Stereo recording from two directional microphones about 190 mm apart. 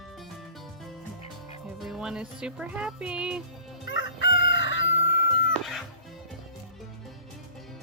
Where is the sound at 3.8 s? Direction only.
70° left (ahead or behind).